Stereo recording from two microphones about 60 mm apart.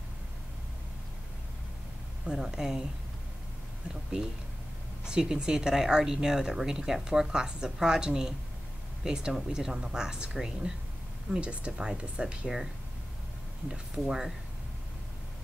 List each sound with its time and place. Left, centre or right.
2.2 s speech: centre
5.0 s speech: centre
13.7 s speech: centre